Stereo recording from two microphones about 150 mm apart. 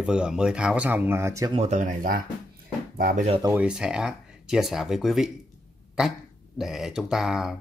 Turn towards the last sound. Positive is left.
turn(degrees=-5)  # may be behind; listen again after turning